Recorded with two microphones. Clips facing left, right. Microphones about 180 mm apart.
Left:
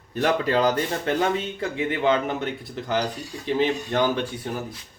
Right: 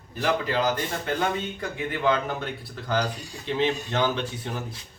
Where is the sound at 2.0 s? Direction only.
20° left (ahead or behind).